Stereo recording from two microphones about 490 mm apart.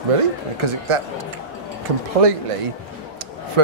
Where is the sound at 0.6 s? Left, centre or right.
Right.